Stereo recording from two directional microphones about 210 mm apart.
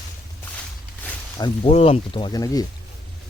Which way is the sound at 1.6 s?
30° left (ahead or behind).